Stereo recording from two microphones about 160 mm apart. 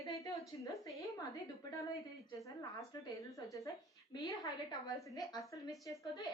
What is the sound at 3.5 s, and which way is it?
A woman's voice, 20° left (ahead or behind).